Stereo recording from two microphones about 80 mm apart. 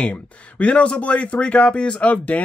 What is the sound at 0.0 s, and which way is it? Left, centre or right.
Speech, centre.